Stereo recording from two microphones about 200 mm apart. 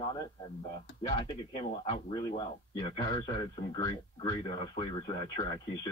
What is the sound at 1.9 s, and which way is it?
A man's voice, 25° left (ahead or behind).